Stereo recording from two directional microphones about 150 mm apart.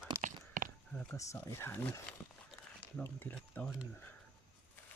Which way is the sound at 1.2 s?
20° left (ahead or behind).